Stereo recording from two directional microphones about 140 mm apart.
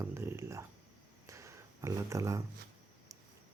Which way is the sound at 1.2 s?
20° right (ahead or behind).